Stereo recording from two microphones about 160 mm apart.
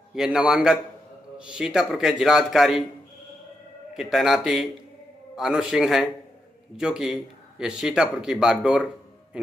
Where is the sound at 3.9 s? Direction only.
Centre (ahead or behind).